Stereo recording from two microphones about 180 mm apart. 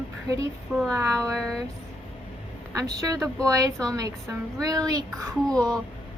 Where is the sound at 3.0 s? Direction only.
20° right (ahead or behind).